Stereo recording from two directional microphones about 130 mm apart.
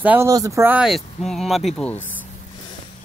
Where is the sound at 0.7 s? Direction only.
5° right (ahead or behind).